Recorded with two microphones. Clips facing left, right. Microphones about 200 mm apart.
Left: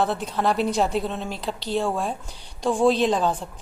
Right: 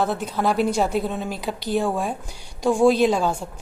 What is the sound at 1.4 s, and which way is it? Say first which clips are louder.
A woman's voice: right 2 dB; 15° right (ahead or behind).